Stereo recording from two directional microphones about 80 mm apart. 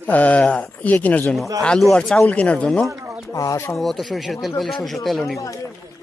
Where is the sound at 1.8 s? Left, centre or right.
Centre.